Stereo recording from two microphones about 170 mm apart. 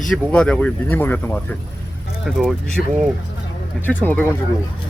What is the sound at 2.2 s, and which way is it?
Speech, centre (ahead or behind).